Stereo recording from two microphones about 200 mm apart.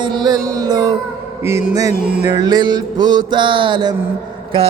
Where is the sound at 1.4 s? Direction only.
10° right (ahead or behind).